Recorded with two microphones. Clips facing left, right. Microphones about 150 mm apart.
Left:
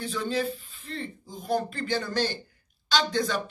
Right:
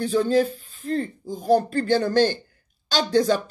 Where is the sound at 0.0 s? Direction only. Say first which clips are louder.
Right 9 dB; 40° right (ahead or behind).